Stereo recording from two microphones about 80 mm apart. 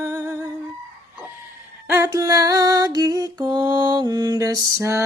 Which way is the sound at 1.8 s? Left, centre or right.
Right.